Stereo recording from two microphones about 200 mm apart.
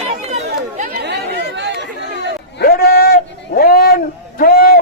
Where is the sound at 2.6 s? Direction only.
50° left (ahead or behind).